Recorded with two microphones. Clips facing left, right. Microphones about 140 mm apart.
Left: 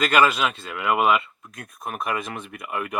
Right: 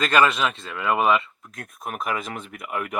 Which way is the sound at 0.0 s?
5° left (ahead or behind).